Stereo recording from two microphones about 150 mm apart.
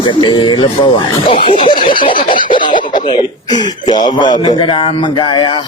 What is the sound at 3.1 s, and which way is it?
Speech, 30° left (ahead or behind).